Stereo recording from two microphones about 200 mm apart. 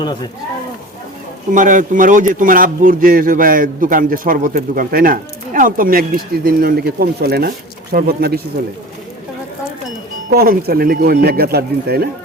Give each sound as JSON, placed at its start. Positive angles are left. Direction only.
{"t": 0.0, "sound": "speech", "side_deg": 20}
{"t": 1.5, "sound": "a man's voice", "side_deg": -40}
{"t": 10.2, "sound": "a man's voice", "side_deg": -45}